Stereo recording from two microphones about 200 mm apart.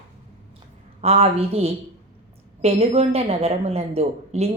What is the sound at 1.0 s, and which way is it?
Speech, 30° right (ahead or behind).